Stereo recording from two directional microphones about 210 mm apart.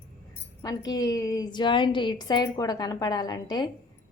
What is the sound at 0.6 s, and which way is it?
Speech, 15° left (ahead or behind).